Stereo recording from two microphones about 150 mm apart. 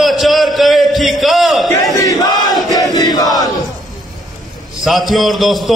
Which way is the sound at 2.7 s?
25° left (ahead or behind).